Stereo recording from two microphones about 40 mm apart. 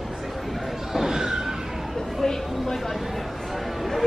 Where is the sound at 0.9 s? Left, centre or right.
Centre.